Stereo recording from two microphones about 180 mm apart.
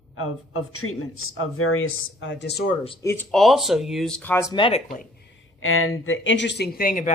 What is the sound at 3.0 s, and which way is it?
Speech, 15° left (ahead or behind).